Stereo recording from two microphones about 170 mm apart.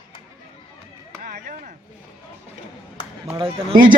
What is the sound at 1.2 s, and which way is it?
Chop, 55° right (ahead or behind).